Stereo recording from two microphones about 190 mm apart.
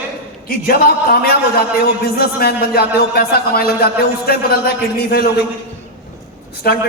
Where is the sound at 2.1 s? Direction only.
55° left (ahead or behind).